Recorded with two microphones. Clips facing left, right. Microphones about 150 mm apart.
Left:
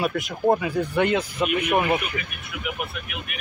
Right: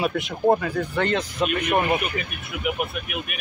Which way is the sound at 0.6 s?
10° left (ahead or behind).